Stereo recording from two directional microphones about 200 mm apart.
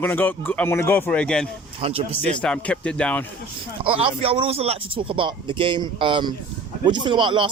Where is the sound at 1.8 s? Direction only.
30° right (ahead or behind).